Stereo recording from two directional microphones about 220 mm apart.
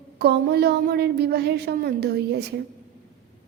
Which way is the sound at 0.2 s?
45° right (ahead or behind).